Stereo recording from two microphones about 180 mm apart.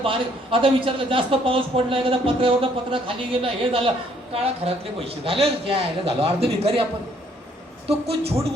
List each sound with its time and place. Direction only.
0.0 s speech: 30° right (ahead or behind)
7.9 s speech: 35° right (ahead or behind)